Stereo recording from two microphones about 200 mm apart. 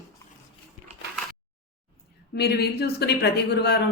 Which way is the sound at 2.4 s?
55° left (ahead or behind).